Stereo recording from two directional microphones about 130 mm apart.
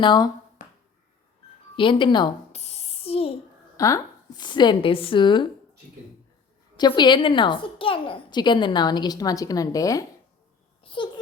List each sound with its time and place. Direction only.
0.0 s a woman's voice: 35° left (ahead or behind)
0.6 s finger snapping: 80° left
1.7 s a woman's voice: 40° left (ahead or behind)
2.5 s a sound: 55° left (ahead or behind)
3.8 s speech: 25° left (ahead or behind)
4.4 s a woman's voice: 35° left (ahead or behind)
6.7 s a woman's voice: 35° left (ahead or behind)
10.8 s babbling: 40° left (ahead or behind)